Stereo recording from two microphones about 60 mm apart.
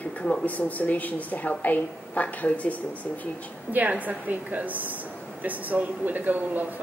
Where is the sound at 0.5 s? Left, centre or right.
Left.